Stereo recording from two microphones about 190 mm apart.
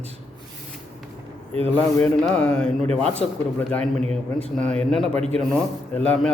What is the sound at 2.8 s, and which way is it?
Speech, 35° right (ahead or behind).